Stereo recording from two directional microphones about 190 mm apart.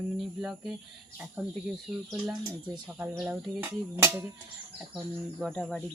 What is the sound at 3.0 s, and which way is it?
Speech, 5° right (ahead or behind).